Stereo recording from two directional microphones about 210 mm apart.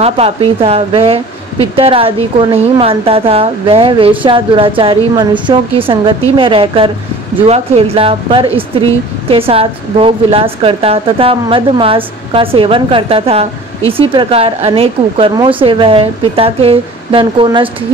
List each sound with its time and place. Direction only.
0.0 s a woman's voice: 25° right (ahead or behind)